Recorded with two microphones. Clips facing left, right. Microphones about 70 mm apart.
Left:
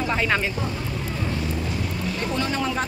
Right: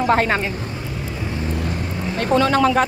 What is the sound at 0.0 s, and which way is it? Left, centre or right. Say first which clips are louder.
Speech: right 7 dB; right.